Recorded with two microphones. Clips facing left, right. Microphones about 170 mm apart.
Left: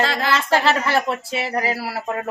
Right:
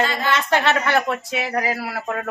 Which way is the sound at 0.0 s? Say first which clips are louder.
Left 1 dB; 90° left.